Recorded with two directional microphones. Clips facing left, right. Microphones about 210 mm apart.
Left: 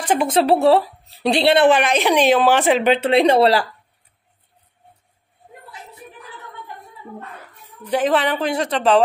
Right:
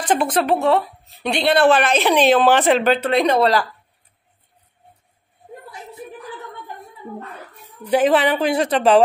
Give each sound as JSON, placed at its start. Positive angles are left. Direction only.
{"t": 0.0, "sound": "a sound", "side_deg": 10}
{"t": 0.3, "sound": "a woman's voice", "side_deg": 30}
{"t": 2.9, "sound": "a woman's voice", "side_deg": 30}
{"t": 7.8, "sound": "a woman's voice", "side_deg": -5}